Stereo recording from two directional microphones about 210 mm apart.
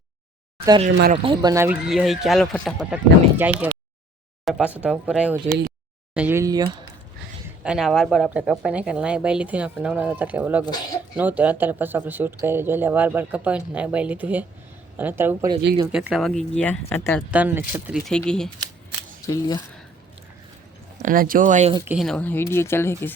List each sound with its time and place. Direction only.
1.1 s speech: 25° right (ahead or behind)
7.4 s speech: 5° right (ahead or behind)
17.3 s speech: 10° right (ahead or behind)
19.2 s speech: 15° left (ahead or behind)
21.0 s speech: 40° right (ahead or behind)
21.9 s speech: 5° left (ahead or behind)